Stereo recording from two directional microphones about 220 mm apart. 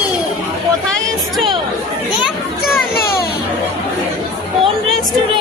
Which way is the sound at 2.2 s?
Centre (ahead or behind).